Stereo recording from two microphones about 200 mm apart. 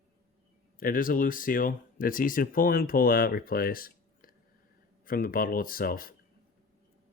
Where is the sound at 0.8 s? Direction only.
45° left (ahead or behind).